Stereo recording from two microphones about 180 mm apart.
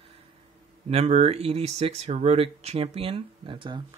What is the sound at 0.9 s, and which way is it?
Speech, 35° right (ahead or behind).